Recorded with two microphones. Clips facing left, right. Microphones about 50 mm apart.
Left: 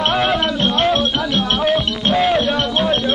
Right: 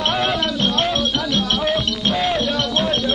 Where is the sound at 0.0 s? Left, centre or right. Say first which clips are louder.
Left 3 dB; centre.